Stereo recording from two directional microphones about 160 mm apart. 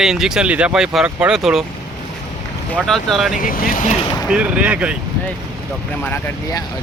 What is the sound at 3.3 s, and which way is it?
Speech, 60° left (ahead or behind).